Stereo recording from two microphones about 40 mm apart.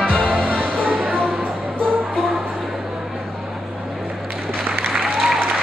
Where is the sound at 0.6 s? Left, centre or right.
Right.